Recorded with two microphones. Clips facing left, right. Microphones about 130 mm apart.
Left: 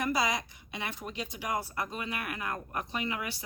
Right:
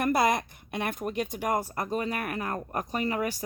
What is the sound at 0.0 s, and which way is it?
Speech, 55° right (ahead or behind).